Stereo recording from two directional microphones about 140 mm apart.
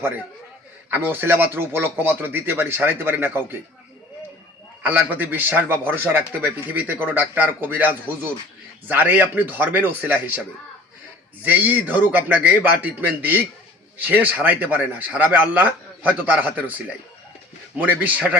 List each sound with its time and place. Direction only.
0.9 s a man's voice: 15° right (ahead or behind)
4.8 s a man's voice: 10° right (ahead or behind)
11.4 s a man's voice: 10° right (ahead or behind)